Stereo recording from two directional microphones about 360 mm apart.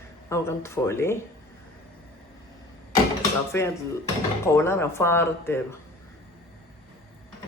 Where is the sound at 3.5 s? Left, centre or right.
Centre.